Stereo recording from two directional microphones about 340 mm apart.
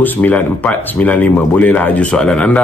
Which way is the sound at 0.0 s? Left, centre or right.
Centre.